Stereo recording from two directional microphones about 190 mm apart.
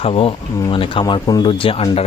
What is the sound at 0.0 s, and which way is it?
Speech, 30° left (ahead or behind).